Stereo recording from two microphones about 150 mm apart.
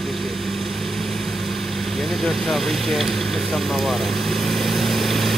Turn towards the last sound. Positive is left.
turn(degrees=0)  # may be behind; listen again after turning